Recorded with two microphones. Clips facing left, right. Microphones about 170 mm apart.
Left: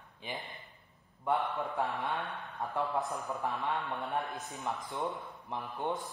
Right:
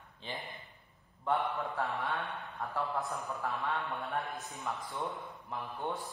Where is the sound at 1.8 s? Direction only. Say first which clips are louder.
Left 1 dB; centre (ahead or behind).